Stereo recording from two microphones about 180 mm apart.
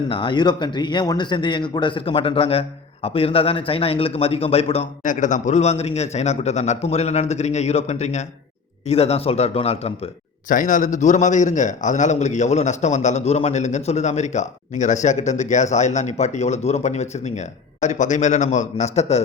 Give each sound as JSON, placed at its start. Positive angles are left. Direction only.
{"t": 0.1, "sound": "a man's voice", "side_deg": 25}
{"t": 5.0, "sound": "a man's voice", "side_deg": 45}
{"t": 10.5, "sound": "a man's voice", "side_deg": 45}